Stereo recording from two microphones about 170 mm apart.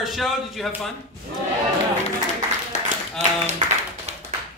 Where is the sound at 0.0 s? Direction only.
Centre (ahead or behind).